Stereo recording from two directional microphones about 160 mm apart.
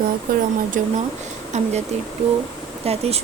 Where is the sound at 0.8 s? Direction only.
55° right (ahead or behind).